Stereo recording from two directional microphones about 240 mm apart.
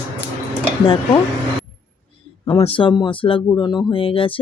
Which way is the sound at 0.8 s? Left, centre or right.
Left.